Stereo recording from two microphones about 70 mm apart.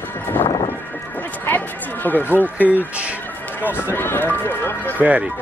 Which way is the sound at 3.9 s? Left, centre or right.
Left.